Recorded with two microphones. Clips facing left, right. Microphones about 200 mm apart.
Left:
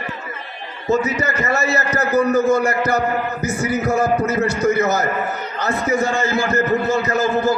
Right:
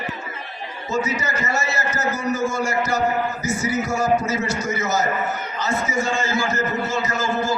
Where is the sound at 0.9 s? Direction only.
60° left (ahead or behind).